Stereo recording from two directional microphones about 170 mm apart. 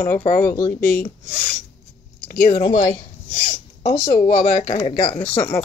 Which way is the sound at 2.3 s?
60° left (ahead or behind).